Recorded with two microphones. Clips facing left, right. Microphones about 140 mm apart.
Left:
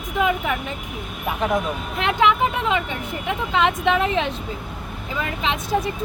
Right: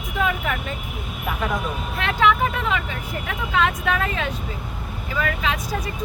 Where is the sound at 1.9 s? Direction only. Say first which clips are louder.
Left 1 dB; 20° left (ahead or behind).